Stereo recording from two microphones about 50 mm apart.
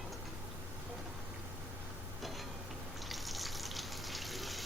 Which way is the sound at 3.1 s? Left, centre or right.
Centre.